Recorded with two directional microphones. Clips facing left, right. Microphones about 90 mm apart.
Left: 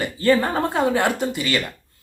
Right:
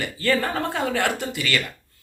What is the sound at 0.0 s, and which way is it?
Speech, 25° left (ahead or behind).